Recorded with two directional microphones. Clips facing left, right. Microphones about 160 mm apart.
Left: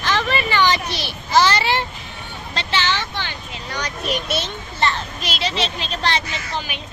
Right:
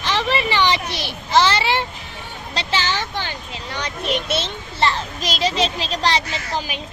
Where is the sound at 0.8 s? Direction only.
20° right (ahead or behind).